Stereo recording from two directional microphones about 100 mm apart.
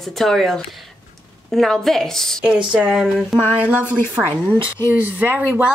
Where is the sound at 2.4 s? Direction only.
10° right (ahead or behind).